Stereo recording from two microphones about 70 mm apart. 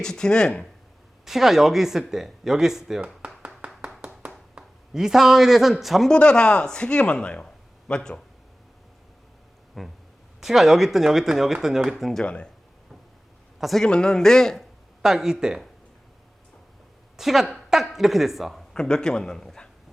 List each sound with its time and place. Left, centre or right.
0.0 s speech: centre
1.2 s speech: centre
3.2 s a sound: centre
4.9 s speech: centre
6.1 s speech: centre
9.8 s speech: centre
12.2 s speech: centre
13.6 s a man's voice: centre
13.8 s speech: centre
15.0 s speech: centre
17.2 s speech: centre
18.7 s a man's voice: centre